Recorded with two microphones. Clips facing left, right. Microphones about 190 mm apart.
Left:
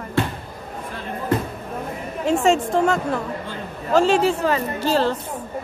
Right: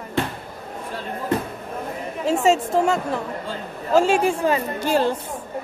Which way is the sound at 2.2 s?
5° right (ahead or behind).